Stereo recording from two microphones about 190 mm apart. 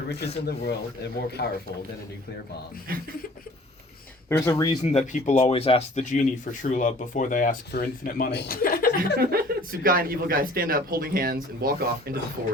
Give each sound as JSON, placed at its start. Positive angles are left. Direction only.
{"t": 0.4, "sound": "speech", "side_deg": 55}
{"t": 2.9, "sound": "speech", "side_deg": -50}
{"t": 4.3, "sound": "speech", "side_deg": 15}
{"t": 4.8, "sound": "speech", "side_deg": 35}
{"t": 9.0, "sound": "speech", "side_deg": -50}